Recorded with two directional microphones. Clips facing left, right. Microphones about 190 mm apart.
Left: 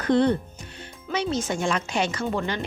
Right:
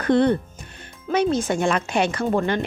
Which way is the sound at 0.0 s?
55° right (ahead or behind).